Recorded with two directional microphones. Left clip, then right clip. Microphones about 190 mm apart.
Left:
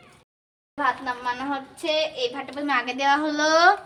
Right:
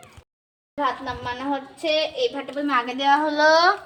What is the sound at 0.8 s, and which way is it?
Speech, 20° left (ahead or behind).